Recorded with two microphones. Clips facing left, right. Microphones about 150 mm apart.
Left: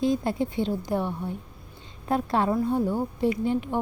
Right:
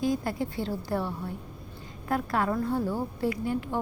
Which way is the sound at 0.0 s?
25° left (ahead or behind).